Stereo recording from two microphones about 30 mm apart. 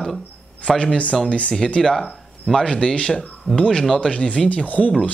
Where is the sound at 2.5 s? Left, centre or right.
Left.